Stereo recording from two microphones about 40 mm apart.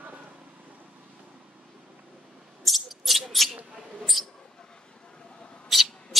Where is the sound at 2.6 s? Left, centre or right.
Centre.